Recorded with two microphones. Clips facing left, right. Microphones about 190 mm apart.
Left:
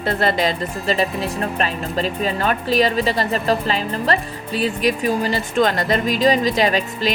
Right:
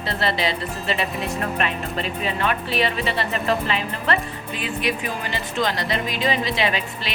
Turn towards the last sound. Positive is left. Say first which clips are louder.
# left 5 dB
turn(degrees=40)  # may be behind; listen again after turning